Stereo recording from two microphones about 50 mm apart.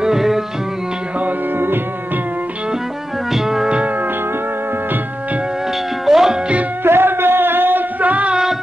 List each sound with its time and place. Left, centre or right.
0.0 s music: centre
3.3 s music: centre
3.6 s music: right
6.0 s music: centre
6.8 s music: right